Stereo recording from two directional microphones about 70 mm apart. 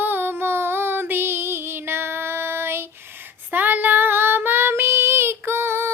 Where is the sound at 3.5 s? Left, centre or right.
Right.